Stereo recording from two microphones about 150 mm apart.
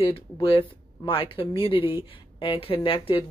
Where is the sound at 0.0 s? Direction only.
35° left (ahead or behind).